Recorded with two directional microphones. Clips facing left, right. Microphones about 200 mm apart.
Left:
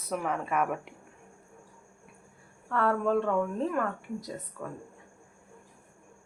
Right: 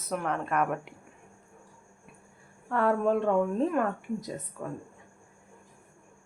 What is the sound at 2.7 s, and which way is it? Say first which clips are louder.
Speech: right 1 dB; 15° right (ahead or behind).